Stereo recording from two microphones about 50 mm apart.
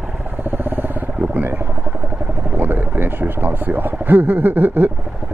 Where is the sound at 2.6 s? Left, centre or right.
Right.